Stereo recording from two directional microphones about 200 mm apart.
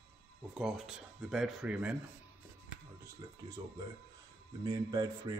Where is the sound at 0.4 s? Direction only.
Centre (ahead or behind).